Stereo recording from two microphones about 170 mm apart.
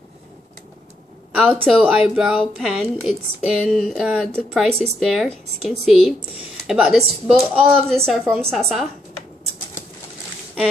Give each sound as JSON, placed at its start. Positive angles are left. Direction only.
{"t": 1.3, "sound": "a woman's voice", "side_deg": -5}